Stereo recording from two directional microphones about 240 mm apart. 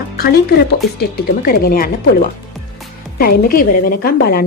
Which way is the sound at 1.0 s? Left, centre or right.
Left.